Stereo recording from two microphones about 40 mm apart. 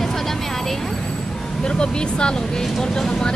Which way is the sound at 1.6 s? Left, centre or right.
Left.